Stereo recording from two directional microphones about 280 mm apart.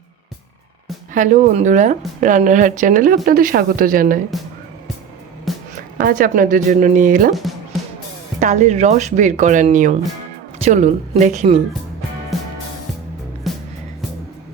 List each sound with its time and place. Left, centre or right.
1.1 s speech: right
5.5 s music: centre
6.0 s speech: right
8.4 s speech: right
12.3 s music: centre